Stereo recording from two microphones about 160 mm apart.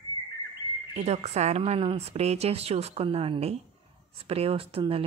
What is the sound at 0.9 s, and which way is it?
A woman's voice, 45° right (ahead or behind).